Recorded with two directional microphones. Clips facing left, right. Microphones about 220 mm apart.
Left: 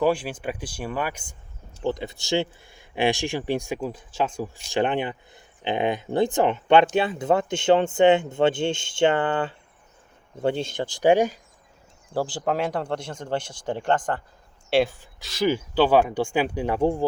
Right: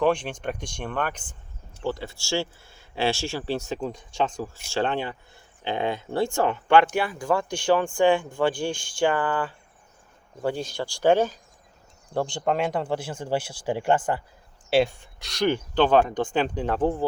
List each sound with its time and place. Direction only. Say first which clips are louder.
0.0 s speech: even; 5° left (ahead or behind)
4.7 s speech: left 3 dB; 15° left (ahead or behind)
12.1 s speech: even; 5° left (ahead or behind)